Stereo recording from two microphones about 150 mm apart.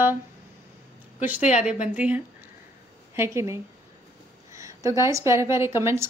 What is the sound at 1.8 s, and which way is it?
A woman's voice, 10° right (ahead or behind).